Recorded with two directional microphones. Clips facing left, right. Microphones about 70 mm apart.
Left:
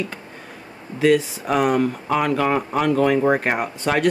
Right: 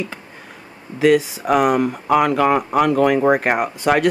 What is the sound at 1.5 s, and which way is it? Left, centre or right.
Speech, right.